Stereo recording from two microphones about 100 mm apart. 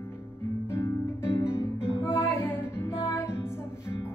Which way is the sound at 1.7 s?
10° right (ahead or behind).